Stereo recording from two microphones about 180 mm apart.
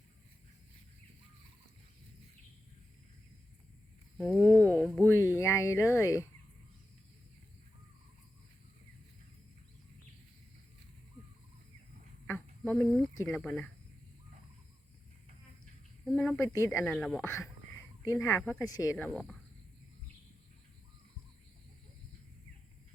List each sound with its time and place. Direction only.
4.4 s a sound: 10° left (ahead or behind)
4.8 s speech: 5° left (ahead or behind)
12.3 s a sound: 5° left (ahead or behind)
13.2 s speech: 5° left (ahead or behind)
16.0 s speech: centre (ahead or behind)
16.4 s speech: 15° left (ahead or behind)
16.8 s speech: centre (ahead or behind)
18.0 s speech: 15° left (ahead or behind)
18.9 s speech: centre (ahead or behind)